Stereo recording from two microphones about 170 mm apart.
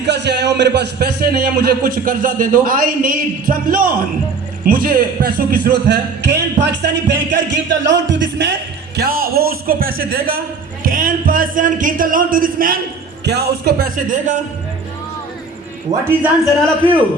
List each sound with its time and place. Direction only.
0.0 s a man's voice: 85° right
9.0 s a man's voice: 60° right (ahead or behind)
13.2 s speech: 75° right (ahead or behind); by 14.4 s 50° right (ahead or behind)
15.9 s speech: 20° right (ahead or behind)
16.6 s a man's voice: 10° left (ahead or behind)